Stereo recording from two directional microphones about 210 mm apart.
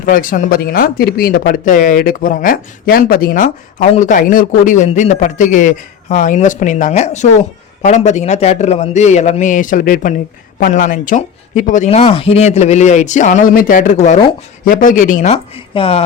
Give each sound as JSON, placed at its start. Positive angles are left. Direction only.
{"t": 0.0, "sound": "speech", "side_deg": 40}